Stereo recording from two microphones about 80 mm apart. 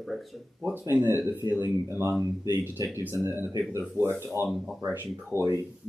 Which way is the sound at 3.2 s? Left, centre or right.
Right.